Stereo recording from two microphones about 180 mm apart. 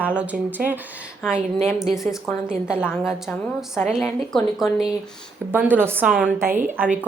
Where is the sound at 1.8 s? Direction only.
Centre (ahead or behind).